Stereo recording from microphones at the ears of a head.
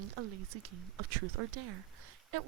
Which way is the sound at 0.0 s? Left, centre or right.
Right.